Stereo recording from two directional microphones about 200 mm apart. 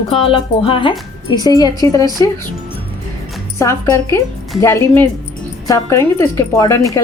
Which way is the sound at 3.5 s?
15° left (ahead or behind).